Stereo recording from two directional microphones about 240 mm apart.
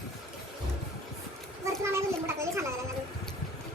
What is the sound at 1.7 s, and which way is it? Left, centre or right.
Children playing, centre.